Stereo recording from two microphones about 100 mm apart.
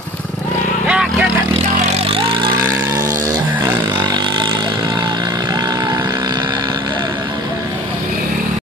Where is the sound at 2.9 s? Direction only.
30° right (ahead or behind).